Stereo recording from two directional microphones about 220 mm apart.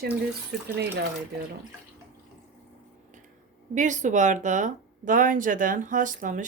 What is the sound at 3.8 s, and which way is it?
Speech, 35° right (ahead or behind).